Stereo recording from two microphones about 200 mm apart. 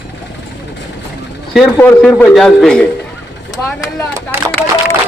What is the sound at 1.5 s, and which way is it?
A man's voice, 5° left (ahead or behind).